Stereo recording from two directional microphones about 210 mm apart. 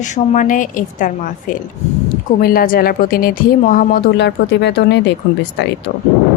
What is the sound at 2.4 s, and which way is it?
A woman's voice, 45° left (ahead or behind).